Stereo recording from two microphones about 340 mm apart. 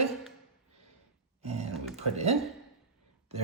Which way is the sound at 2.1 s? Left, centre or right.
Centre.